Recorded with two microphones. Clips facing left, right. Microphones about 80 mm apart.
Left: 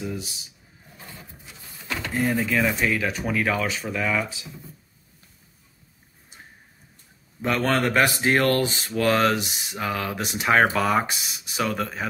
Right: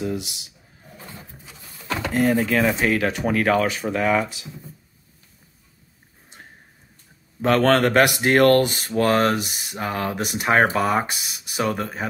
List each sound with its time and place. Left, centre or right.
0.0 s speech: right
2.0 s speech: right
2.4 s speech: right
2.8 s speech: right
3.3 s speech: right
7.4 s speech: right
8.5 s speech: right
11.7 s speech: right